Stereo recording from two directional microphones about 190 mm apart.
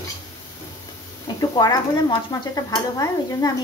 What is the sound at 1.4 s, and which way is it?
Speech, 20° left (ahead or behind).